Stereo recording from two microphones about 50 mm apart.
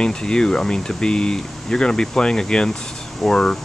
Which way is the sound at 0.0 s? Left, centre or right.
Centre.